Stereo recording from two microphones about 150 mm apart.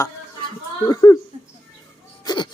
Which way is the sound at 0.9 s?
25° left (ahead or behind).